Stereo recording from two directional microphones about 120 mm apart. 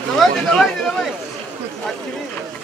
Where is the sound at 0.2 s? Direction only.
5° left (ahead or behind).